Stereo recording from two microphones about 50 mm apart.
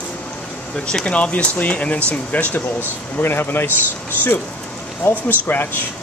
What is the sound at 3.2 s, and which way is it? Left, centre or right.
Speech, left.